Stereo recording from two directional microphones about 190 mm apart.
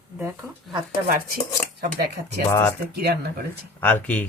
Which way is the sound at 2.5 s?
15° left (ahead or behind).